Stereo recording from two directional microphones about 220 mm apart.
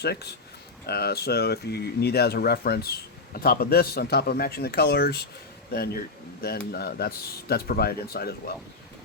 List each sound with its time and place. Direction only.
0.0 s speech: 45° left (ahead or behind)